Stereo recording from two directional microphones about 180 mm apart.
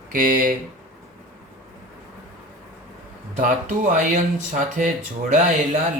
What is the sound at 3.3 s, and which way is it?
Speech, 45° right (ahead or behind).